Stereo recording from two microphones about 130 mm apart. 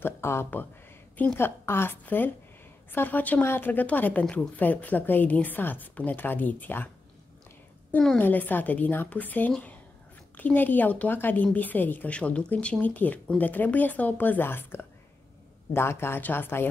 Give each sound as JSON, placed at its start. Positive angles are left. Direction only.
{"t": 0.0, "sound": "a woman's voice", "side_deg": 20}
{"t": 7.9, "sound": "a woman's voice", "side_deg": 10}